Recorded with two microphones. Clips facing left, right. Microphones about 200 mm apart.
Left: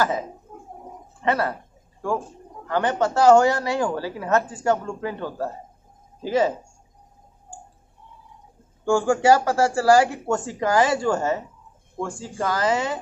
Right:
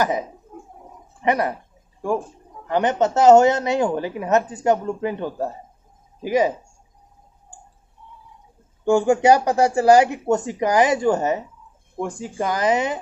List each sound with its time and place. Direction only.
1.2 s a sound: 15° right (ahead or behind)
2.7 s speech: 20° right (ahead or behind)
8.8 s speech: 20° right (ahead or behind)